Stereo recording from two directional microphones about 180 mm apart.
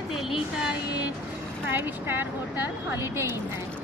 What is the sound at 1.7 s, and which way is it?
Speech, 10° right (ahead or behind).